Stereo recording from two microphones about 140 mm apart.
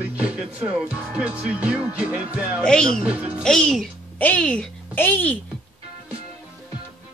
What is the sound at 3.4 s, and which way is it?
A woman's voice, 5° left (ahead or behind).